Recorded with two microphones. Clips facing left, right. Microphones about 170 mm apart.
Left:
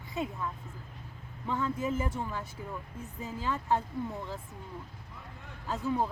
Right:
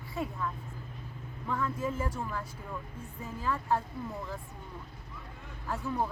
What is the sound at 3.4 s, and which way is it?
Speech, 20° left (ahead or behind).